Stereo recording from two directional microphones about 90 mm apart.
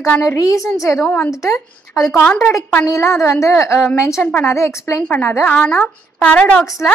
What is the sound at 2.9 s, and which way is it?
Speech, 30° left (ahead or behind).